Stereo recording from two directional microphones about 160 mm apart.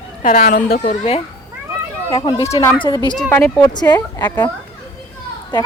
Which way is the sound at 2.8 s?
25° left (ahead or behind).